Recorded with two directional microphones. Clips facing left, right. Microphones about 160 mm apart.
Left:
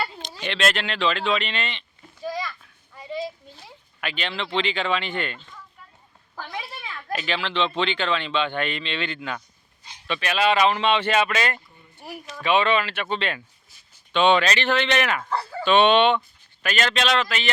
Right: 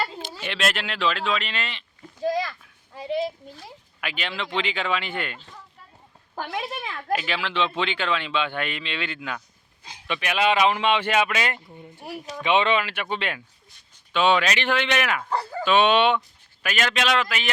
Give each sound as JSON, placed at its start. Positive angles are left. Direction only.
{"t": 0.0, "sound": "speech", "side_deg": -5}
{"t": 2.4, "sound": "a sound", "side_deg": -75}
{"t": 4.0, "sound": "speech", "side_deg": -10}
{"t": 7.1, "sound": "speech", "side_deg": -10}